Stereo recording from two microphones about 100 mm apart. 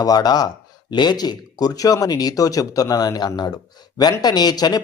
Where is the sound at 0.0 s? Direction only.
40° left (ahead or behind).